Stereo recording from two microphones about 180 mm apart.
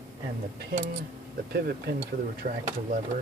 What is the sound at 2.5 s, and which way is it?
Speech, 50° right (ahead or behind).